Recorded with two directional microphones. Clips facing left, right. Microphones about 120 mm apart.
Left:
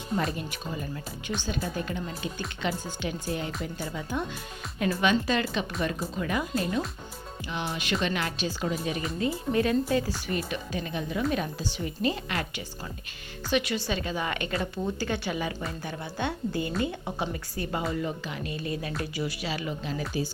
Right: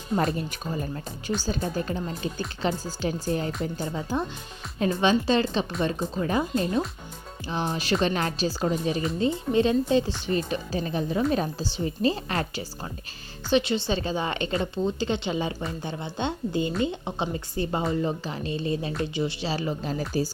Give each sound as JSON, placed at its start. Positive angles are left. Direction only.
{"t": 0.3, "sound": "a woman's voice", "side_deg": -40}